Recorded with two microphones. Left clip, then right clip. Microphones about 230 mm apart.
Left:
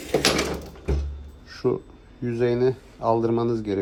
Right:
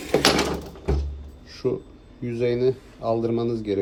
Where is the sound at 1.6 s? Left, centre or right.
Left.